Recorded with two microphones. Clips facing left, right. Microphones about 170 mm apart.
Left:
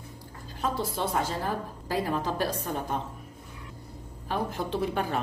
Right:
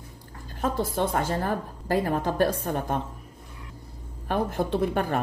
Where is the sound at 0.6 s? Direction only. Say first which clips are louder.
Right 4 dB; 50° right (ahead or behind).